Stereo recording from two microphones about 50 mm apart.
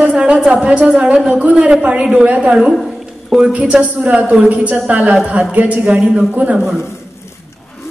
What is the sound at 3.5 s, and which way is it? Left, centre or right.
A woman's voice, right.